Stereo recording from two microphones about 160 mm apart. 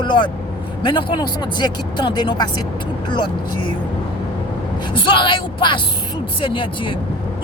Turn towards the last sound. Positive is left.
turn(degrees=30)  # may be behind; listen again after turning